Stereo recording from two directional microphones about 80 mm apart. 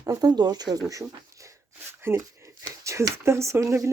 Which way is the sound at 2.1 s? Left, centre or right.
Right.